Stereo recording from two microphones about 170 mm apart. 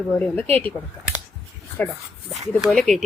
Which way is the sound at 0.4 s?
35° right (ahead or behind).